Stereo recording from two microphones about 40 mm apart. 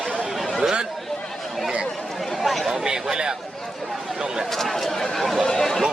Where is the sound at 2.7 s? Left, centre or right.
Centre.